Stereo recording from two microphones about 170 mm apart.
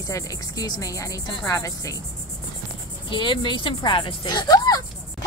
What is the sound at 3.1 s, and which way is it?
A woman's voice, 30° left (ahead or behind).